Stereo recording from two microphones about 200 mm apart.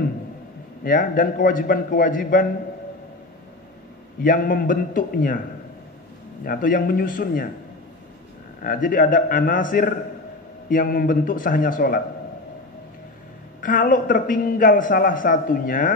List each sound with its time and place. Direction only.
0.8 s a man's voice: 45° left (ahead or behind)
4.2 s a man's voice: 45° left (ahead or behind)
6.4 s a man's voice: 45° left (ahead or behind)
8.6 s a man's voice: 45° left (ahead or behind)
13.6 s a man's voice: 45° left (ahead or behind)